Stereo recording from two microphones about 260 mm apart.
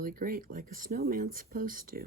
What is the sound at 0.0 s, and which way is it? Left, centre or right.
Speech, right.